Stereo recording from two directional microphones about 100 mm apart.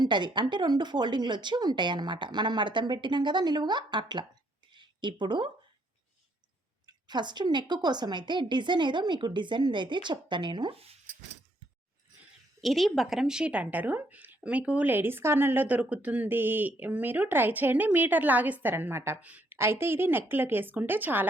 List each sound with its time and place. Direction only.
0.0 s a woman's voice: 50° right (ahead or behind)
4.7 s a sound: 50° right (ahead or behind)
6.8 s a woman's voice: 45° right (ahead or behind)
12.6 s a woman's voice: centre (ahead or behind); by 21.2 s 20° right (ahead or behind)